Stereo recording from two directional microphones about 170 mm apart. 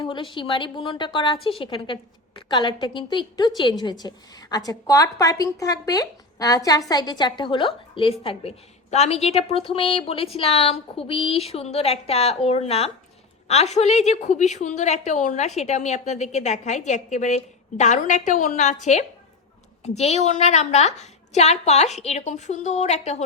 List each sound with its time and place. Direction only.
0.0 s a woman's voice: 25° left (ahead or behind)